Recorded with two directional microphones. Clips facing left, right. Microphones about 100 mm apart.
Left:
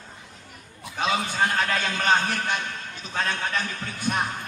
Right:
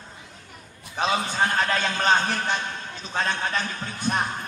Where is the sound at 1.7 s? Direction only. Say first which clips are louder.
Right 1 dB; 30° right (ahead or behind).